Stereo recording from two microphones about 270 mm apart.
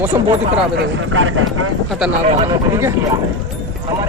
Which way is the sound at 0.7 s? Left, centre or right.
Right.